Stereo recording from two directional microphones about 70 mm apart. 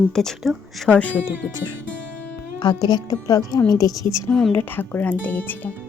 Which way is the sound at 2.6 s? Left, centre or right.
Left.